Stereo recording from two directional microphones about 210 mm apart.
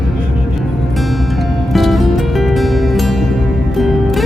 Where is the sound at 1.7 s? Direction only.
Centre (ahead or behind).